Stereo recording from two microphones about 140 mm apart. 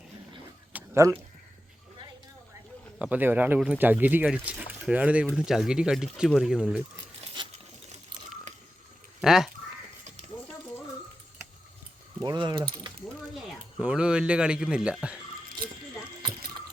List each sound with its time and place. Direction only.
0.7 s a sound: 10° right (ahead or behind)
3.0 s speech: 10° right (ahead or behind)
7.4 s coin: 35° right (ahead or behind)
9.2 s speech: 5° right (ahead or behind)
12.2 s speech: 30° right (ahead or behind)
13.7 s speech: 5° right (ahead or behind)